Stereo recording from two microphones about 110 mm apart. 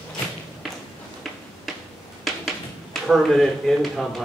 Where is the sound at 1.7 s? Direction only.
Centre (ahead or behind).